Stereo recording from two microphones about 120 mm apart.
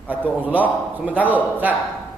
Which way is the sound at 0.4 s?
15° right (ahead or behind).